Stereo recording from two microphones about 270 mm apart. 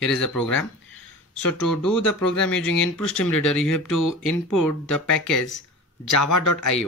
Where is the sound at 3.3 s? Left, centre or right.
Left.